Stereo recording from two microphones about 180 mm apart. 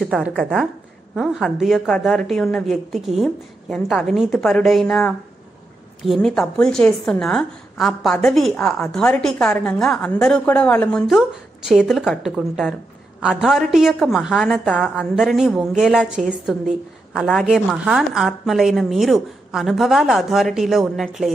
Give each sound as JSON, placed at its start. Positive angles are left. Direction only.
{"t": 0.0, "sound": "a woman's voice", "side_deg": 0}